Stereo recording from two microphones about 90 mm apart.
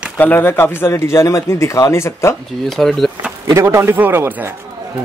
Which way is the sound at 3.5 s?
30° right (ahead or behind).